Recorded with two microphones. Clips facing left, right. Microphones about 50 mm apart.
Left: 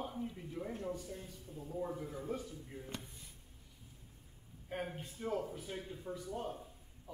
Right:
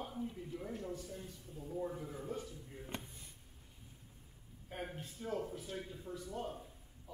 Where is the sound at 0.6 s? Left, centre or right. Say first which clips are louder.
Left 3 dB; left.